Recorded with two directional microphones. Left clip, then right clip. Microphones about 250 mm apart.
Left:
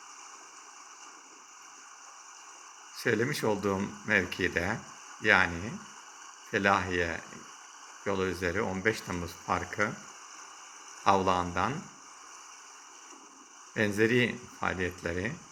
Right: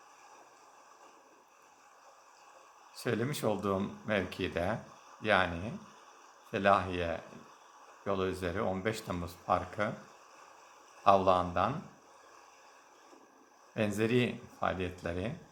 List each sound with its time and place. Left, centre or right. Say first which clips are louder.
2.9 s speech: left 6 dB; centre
11.0 s speech: even; centre
13.7 s speech: left 5 dB; centre